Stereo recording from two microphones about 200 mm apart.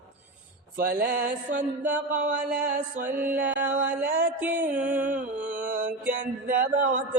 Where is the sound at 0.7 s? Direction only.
50° right (ahead or behind).